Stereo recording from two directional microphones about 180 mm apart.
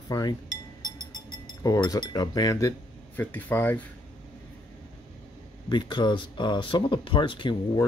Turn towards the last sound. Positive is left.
turn(degrees=25)  # may be behind; listen again after turning